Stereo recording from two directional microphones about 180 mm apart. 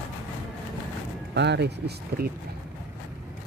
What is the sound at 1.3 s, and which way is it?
Speech, 70° right (ahead or behind).